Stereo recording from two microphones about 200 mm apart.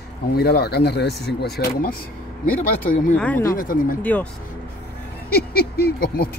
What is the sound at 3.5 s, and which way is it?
Speech, 45° left (ahead or behind).